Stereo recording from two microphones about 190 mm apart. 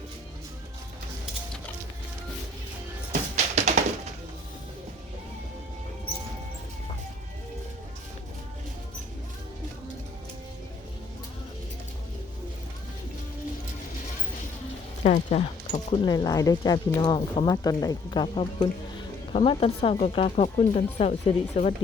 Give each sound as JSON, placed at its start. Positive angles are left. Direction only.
{"t": 3.1, "sound": "music", "side_deg": -35}
{"t": 15.0, "sound": "speech", "side_deg": 35}
{"t": 16.0, "sound": "speech", "side_deg": 20}